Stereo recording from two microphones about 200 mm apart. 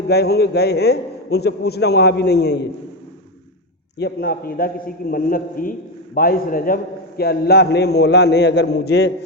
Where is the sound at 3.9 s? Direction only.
50° left (ahead or behind).